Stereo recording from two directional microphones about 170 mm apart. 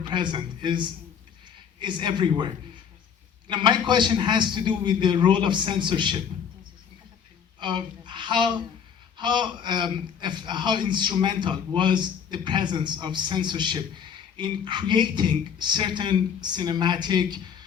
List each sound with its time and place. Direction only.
0.1 s speech: 30° right (ahead or behind)
3.5 s speech: 25° right (ahead or behind)
7.6 s speech: 30° right (ahead or behind)